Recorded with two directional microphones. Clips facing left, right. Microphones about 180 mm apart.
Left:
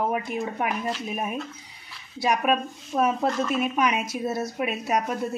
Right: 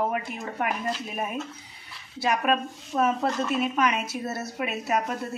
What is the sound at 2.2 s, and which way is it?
A woman's voice, 15° left (ahead or behind).